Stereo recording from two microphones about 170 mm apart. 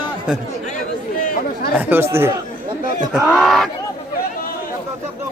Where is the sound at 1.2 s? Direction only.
55° left (ahead or behind).